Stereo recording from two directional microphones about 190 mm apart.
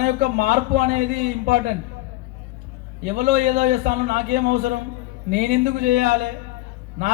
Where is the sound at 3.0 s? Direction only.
45° right (ahead or behind).